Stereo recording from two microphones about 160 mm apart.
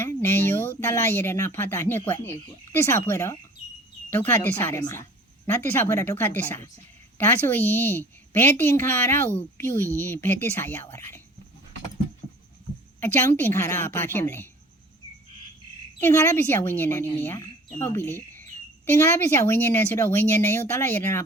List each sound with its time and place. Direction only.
0.0 s speech: 15° left (ahead or behind)
13.0 s speech: 15° left (ahead or behind)
16.0 s speech: 15° left (ahead or behind)